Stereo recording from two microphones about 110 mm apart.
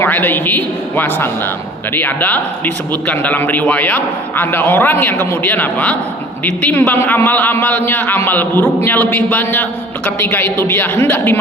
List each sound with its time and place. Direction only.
0.0 s a man's voice: 15° left (ahead or behind)